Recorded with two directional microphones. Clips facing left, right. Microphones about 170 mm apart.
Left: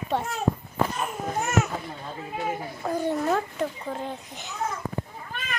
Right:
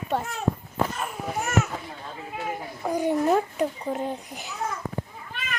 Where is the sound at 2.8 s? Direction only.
15° right (ahead or behind).